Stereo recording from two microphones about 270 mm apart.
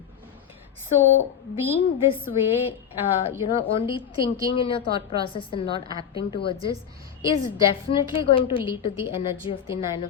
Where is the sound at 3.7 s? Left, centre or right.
Centre.